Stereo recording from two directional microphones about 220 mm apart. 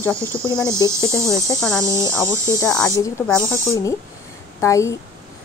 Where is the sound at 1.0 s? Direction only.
15° left (ahead or behind).